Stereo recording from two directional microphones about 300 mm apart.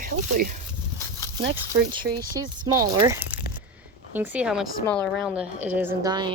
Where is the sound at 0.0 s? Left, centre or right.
Right.